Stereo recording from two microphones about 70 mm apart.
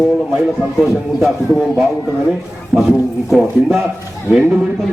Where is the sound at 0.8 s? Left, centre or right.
Centre.